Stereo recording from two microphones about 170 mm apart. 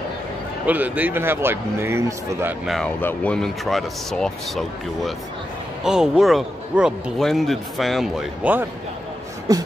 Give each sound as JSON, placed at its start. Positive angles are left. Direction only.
{"t": 0.7, "sound": "a man's voice", "side_deg": -10}
{"t": 2.6, "sound": "a man's voice", "side_deg": 0}
{"t": 9.5, "sound": "a sound", "side_deg": -20}